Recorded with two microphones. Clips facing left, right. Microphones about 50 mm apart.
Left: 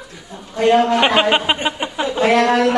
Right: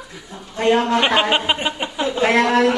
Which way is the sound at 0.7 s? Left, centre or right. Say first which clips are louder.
Left 3 dB; centre.